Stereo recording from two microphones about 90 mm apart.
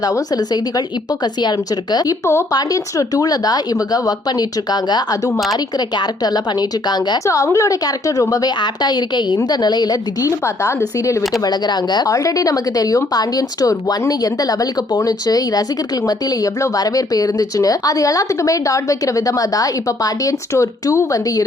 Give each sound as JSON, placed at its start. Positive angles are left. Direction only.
{"t": 0.0, "sound": "speech", "side_deg": 45}
{"t": 7.3, "sound": "speech", "side_deg": 35}
{"t": 10.4, "sound": "speech", "side_deg": 30}
{"t": 11.4, "sound": "speech", "side_deg": 50}
{"t": 12.1, "sound": "speech", "side_deg": 40}